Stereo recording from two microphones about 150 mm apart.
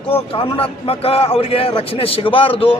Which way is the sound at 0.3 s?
40° left (ahead or behind).